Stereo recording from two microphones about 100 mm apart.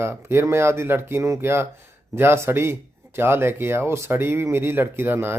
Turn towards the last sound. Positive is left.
turn(degrees=-25)  # may be behind; listen again after turning